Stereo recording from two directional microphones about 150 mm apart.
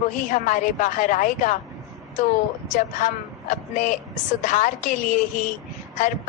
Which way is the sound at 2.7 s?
60° left (ahead or behind).